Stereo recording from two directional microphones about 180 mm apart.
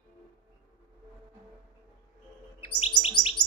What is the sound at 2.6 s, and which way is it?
Chirp, 30° left (ahead or behind).